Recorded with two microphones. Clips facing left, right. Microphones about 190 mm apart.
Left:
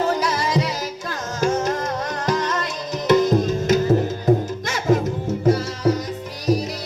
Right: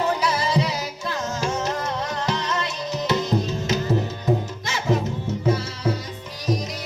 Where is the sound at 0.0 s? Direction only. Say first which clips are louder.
Left 2 dB; 45° left (ahead or behind).